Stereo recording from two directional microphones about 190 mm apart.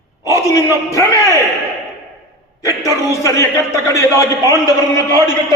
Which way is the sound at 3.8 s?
15° left (ahead or behind).